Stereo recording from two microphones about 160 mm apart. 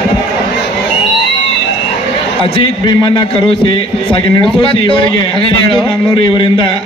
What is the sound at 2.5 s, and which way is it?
A man's voice, 30° left (ahead or behind).